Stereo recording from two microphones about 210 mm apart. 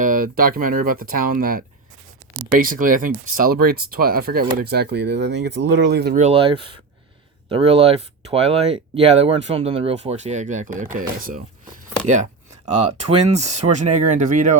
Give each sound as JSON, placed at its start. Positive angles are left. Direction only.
{"t": 0.0, "sound": "speech", "side_deg": -40}
{"t": 6.1, "sound": "speech", "side_deg": -30}